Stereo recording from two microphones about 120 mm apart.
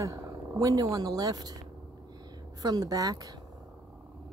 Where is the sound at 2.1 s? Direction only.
35° right (ahead or behind).